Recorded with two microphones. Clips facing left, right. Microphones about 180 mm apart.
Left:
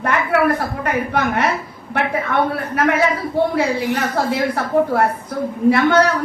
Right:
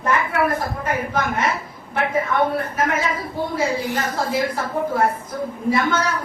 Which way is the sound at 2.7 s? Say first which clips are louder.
Left 5 dB; 65° left (ahead or behind).